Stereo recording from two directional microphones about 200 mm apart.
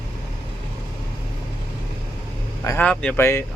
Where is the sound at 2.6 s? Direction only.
10° left (ahead or behind).